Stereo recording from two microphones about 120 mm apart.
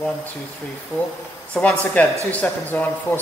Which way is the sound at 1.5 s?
10° left (ahead or behind).